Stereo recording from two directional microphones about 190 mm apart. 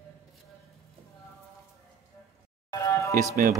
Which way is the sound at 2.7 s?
15° left (ahead or behind).